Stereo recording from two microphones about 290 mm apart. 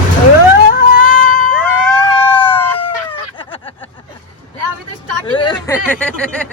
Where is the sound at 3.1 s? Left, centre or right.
Centre.